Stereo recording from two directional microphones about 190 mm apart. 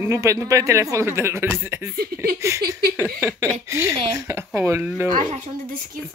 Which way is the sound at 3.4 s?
15° right (ahead or behind).